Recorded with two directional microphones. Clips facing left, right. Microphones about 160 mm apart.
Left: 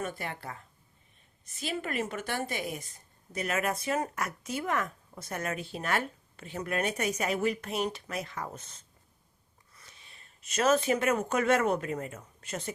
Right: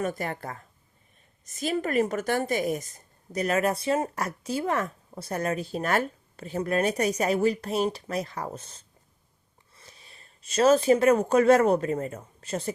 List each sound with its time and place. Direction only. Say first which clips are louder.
0.0 s a woman's voice: right 6 dB; 45° right (ahead or behind)